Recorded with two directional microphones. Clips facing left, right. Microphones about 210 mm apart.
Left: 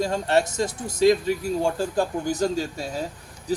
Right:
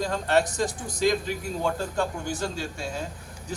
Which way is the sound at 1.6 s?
35° left (ahead or behind).